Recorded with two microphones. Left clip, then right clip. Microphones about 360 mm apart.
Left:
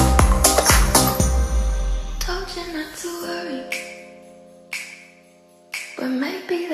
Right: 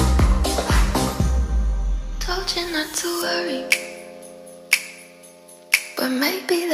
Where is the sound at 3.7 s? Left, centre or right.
Right.